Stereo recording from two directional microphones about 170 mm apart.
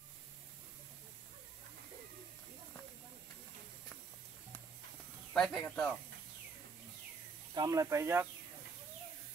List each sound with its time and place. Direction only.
5.3 s speech: 5° left (ahead or behind)
7.5 s speech: 20° right (ahead or behind)